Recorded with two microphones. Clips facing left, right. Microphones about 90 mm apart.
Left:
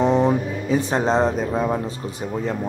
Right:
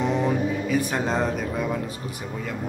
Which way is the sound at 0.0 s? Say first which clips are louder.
Left 5 dB; 30° left (ahead or behind).